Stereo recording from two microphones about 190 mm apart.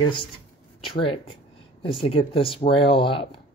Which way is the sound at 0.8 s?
30° left (ahead or behind).